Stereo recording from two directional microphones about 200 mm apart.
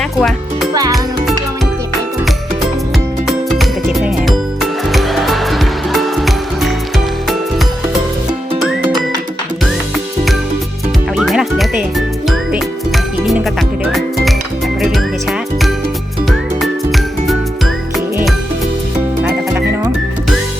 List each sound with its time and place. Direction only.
0.0 s music: centre (ahead or behind)
0.7 s music: 20° right (ahead or behind)
3.2 s music: centre (ahead or behind)
11.2 s music: centre (ahead or behind)
19.2 s music: 10° right (ahead or behind)